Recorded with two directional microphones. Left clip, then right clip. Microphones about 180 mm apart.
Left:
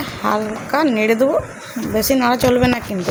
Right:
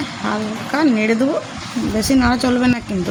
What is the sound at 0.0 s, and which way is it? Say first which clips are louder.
Speech: left 3 dB; 10° left (ahead or behind).